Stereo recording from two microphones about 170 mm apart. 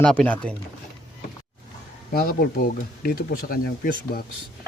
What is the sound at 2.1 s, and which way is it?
Speech, 65° left (ahead or behind).